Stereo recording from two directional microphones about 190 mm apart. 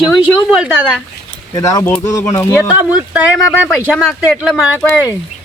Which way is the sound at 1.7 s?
15° left (ahead or behind).